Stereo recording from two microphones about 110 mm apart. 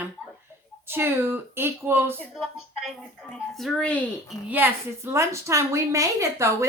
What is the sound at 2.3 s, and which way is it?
A woman's voice, centre (ahead or behind).